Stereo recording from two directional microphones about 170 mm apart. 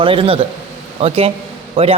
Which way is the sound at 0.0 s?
30° right (ahead or behind).